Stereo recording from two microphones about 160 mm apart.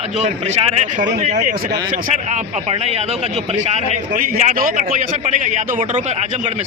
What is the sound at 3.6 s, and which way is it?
A man's voice, 45° right (ahead or behind).